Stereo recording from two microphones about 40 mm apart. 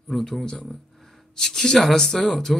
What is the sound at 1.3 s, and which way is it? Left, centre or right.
A man's voice, centre.